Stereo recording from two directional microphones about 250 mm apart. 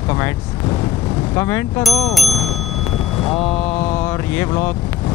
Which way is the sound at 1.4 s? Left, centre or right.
Centre.